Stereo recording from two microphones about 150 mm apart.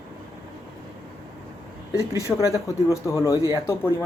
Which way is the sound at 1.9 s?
20° left (ahead or behind).